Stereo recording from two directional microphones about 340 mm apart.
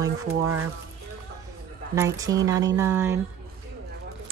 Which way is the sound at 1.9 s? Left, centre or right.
Centre.